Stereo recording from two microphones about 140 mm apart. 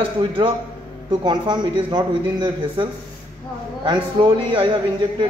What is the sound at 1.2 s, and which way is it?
A man's voice, 35° right (ahead or behind).